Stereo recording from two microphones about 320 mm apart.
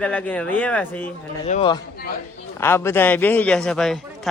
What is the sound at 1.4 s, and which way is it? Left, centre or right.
A man's voice, centre.